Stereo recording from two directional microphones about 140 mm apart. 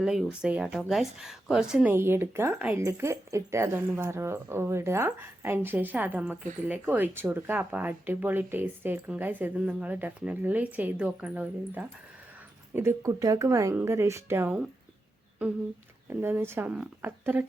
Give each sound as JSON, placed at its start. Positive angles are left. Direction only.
{"t": 0.0, "sound": "speech", "side_deg": -5}
{"t": 1.9, "sound": "speech", "side_deg": -15}
{"t": 16.0, "sound": "speech", "side_deg": -15}